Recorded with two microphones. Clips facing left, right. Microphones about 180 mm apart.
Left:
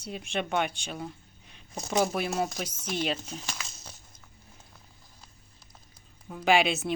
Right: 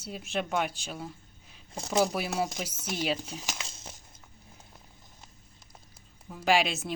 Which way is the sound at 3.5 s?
25° right (ahead or behind).